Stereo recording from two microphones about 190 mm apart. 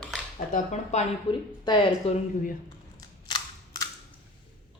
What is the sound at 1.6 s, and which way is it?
Speech, 25° left (ahead or behind).